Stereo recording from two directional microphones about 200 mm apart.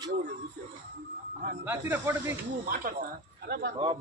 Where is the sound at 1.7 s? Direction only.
10° right (ahead or behind).